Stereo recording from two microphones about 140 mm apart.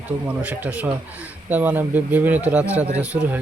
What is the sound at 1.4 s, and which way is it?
Speech, 10° right (ahead or behind).